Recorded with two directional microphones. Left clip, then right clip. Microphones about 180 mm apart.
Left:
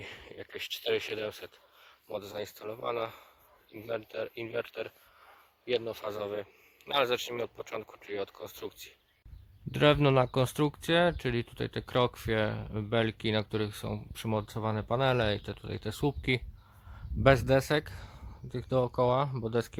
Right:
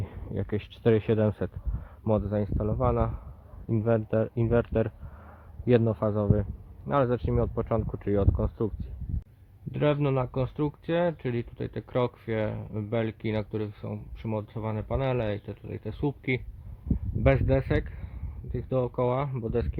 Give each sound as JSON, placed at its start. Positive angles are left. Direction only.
{"t": 0.8, "sound": "speech", "side_deg": 5}
{"t": 3.9, "sound": "speech", "side_deg": 5}
{"t": 5.6, "sound": "speech", "side_deg": -5}
{"t": 6.1, "sound": "speech", "side_deg": 20}
{"t": 9.7, "sound": "speech", "side_deg": 25}